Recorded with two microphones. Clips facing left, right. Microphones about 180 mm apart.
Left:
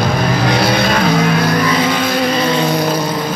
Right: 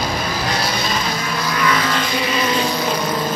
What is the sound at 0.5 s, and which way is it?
Vehicle, 60° left (ahead or behind).